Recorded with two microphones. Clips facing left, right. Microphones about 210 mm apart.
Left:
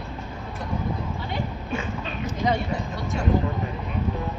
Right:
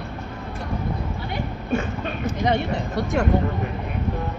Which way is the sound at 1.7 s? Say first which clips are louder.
Right 9 dB; 50° right (ahead or behind).